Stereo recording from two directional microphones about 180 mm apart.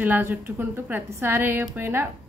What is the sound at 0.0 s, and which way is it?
Speech, 10° right (ahead or behind).